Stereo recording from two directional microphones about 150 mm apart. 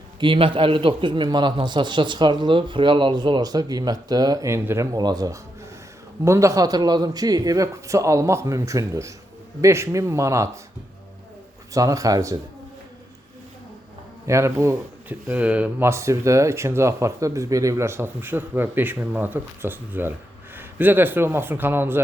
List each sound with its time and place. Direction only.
0.2 s a man's voice: 35° right (ahead or behind); by 10.6 s 20° right (ahead or behind)
11.7 s a man's voice: 20° right (ahead or behind)
14.3 s a man's voice: 20° right (ahead or behind)